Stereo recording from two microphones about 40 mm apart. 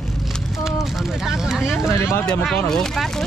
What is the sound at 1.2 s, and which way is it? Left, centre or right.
Speech, centre.